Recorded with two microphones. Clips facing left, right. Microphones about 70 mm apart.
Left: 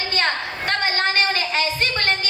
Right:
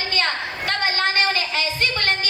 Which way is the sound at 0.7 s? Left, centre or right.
Left.